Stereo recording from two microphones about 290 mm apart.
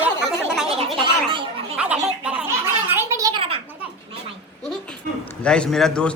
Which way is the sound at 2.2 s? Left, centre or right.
Centre.